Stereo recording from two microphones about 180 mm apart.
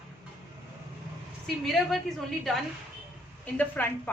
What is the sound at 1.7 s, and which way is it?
A woman's voice, centre (ahead or behind).